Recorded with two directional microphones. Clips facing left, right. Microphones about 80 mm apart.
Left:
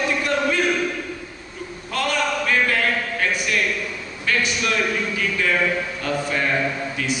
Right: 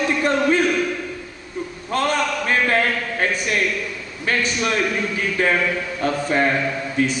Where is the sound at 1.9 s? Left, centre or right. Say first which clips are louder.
Right 2 dB; right.